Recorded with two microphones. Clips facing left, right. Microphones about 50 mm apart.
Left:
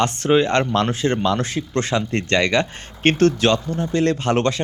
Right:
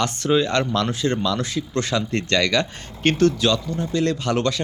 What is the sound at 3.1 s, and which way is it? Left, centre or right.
Speech, left.